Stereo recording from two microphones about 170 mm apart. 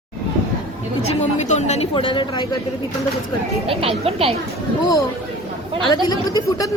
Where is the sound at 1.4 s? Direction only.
40° left (ahead or behind).